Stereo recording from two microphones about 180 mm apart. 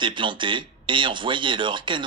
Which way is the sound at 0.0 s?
25° right (ahead or behind).